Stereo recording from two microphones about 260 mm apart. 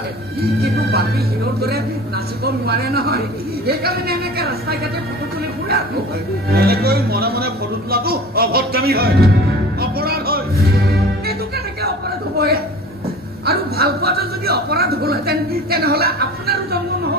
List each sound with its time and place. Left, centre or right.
0.6 s speech: right
2.4 s speech: right
6.5 s speech: right
9.8 s music: right
12.4 s speech: right